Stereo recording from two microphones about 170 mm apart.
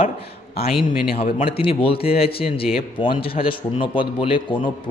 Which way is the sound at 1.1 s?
35° left (ahead or behind).